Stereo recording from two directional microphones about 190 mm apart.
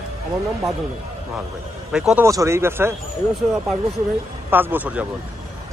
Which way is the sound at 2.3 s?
15° right (ahead or behind).